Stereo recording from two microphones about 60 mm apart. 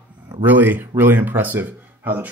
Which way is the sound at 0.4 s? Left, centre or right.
Right.